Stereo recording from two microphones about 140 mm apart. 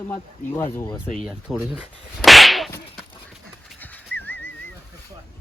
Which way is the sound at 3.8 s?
15° left (ahead or behind).